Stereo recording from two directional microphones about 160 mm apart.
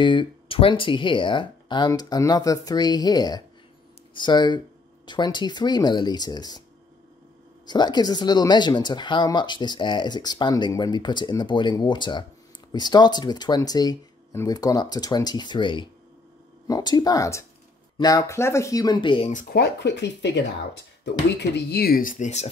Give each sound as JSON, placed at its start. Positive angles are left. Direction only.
{"t": 0.0, "sound": "speech", "side_deg": 30}
{"t": 7.6, "sound": "speech", "side_deg": 25}
{"t": 19.5, "sound": "speech", "side_deg": 90}